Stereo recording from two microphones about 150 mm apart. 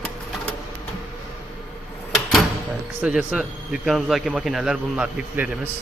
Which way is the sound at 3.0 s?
5° right (ahead or behind).